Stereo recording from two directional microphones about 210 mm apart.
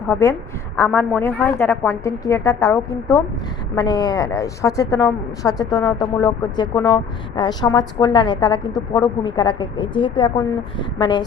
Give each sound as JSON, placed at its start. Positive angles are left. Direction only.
{"t": 0.0, "sound": "a woman's voice", "side_deg": 10}